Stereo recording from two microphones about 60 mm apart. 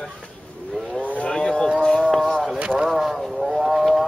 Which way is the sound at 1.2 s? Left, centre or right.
Centre.